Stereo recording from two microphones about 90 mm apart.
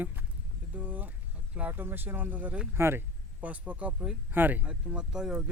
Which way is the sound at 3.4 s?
15° right (ahead or behind).